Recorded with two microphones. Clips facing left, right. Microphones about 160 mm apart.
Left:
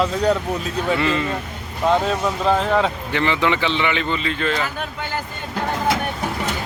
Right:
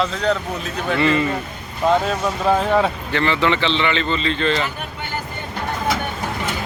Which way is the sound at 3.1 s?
15° left (ahead or behind).